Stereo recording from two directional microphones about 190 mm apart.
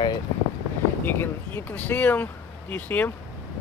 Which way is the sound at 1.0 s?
10° left (ahead or behind).